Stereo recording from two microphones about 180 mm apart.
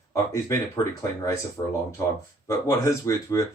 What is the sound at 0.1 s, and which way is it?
Speech, 15° left (ahead or behind).